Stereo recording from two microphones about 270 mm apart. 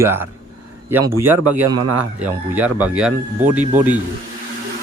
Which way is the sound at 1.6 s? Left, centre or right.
Right.